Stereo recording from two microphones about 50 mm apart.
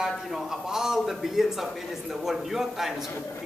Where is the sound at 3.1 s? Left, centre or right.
Left.